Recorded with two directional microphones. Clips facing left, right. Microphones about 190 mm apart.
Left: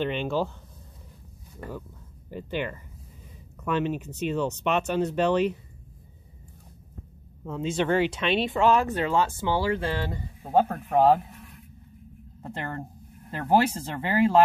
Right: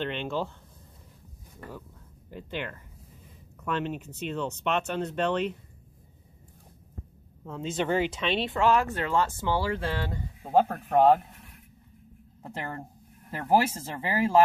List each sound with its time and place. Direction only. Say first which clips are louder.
0.0 s speech: left 4 dB; 5° left (ahead or behind)
2.3 s speech: left 5 dB; 5° left (ahead or behind)
7.4 s speech: left 3 dB; centre (ahead or behind)
8.5 s speech: left 2 dB; 20° left (ahead or behind)
9.1 s speech: even; centre (ahead or behind)
12.4 s a woman's voice: left 2 dB; 5° right (ahead or behind)